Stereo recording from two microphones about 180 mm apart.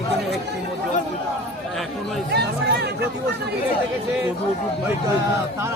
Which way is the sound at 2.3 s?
65° right (ahead or behind).